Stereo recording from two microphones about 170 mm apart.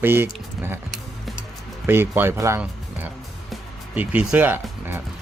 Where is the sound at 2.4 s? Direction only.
15° right (ahead or behind).